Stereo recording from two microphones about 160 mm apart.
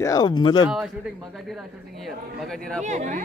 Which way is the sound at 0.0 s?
25° left (ahead or behind).